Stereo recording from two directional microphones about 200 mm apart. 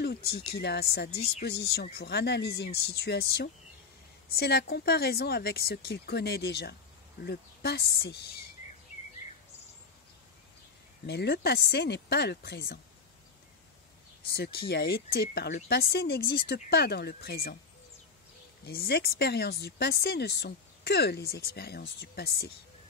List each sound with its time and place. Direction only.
0.0 s speech: 55° left (ahead or behind)
11.1 s speech: 55° left (ahead or behind)
14.2 s speech: 50° left (ahead or behind)
18.7 s speech: 50° left (ahead or behind)